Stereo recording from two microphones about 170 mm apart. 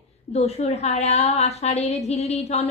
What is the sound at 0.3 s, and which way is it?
A woman's voice, 40° left (ahead or behind).